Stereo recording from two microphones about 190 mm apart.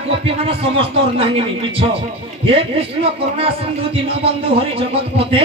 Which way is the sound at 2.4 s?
30° right (ahead or behind).